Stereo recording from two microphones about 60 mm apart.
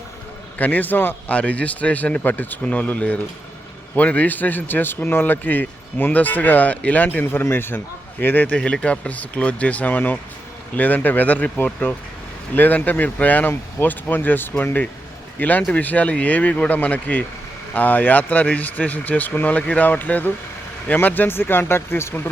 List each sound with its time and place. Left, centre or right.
0.6 s speech: left
1.3 s a man's voice: left
8.5 s a man's voice: centre; by 22.3 s left